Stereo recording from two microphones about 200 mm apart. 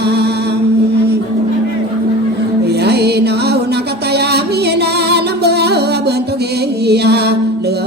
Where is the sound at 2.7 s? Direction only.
55° right (ahead or behind).